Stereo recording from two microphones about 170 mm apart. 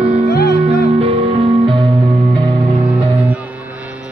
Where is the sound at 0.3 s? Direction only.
70° left (ahead or behind).